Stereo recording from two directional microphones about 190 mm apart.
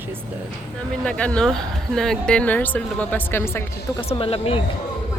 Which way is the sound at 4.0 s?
30° left (ahead or behind).